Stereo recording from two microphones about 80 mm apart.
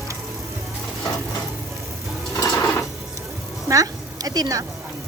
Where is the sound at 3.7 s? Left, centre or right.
Right.